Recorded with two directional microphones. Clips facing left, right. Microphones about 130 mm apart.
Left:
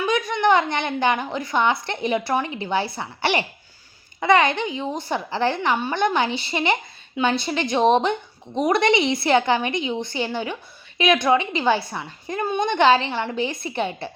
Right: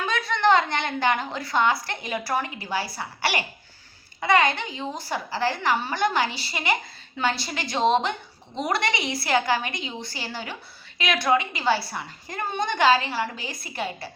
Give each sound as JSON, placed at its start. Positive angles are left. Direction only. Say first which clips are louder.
{"t": 0.0, "sound": "a woman's voice", "louder": "left 3 dB", "side_deg": 15}